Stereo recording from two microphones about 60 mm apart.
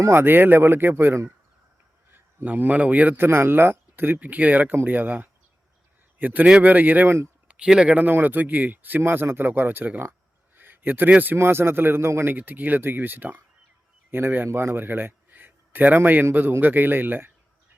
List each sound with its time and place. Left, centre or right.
0.1 s speech: right
2.4 s speech: right
3.2 s speech: right
7.4 s speech: centre; by 12.4 s right
12.4 s a man's voice: right